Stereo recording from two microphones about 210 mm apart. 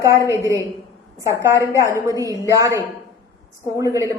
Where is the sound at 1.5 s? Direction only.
15° left (ahead or behind).